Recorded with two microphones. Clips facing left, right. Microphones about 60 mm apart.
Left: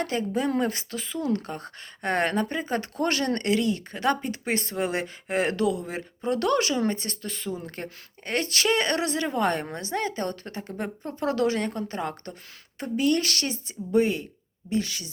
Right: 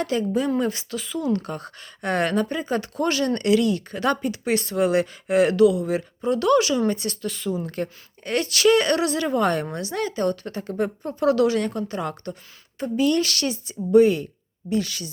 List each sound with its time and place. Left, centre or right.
0.0 s speech: left
4.3 s speech: left
6.2 s speech: left